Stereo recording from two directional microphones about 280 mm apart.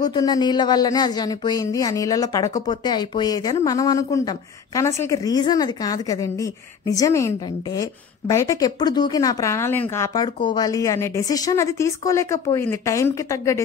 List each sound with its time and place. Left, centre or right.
0.0 s speech: centre